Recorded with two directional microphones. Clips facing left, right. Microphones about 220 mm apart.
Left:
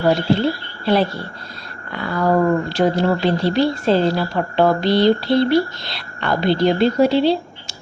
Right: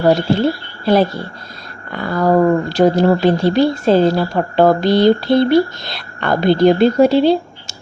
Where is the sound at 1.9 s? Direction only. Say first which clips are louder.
Right 4 dB; 45° right (ahead or behind).